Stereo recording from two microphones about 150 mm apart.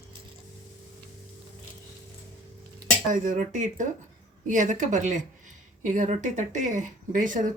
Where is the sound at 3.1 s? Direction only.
60° right (ahead or behind).